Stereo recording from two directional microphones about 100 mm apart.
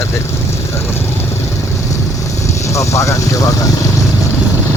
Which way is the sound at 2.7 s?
30° left (ahead or behind).